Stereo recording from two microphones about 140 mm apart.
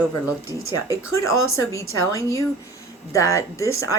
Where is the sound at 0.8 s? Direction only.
20° left (ahead or behind).